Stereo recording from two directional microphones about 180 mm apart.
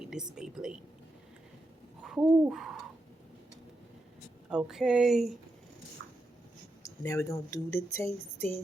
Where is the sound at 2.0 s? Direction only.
5° right (ahead or behind).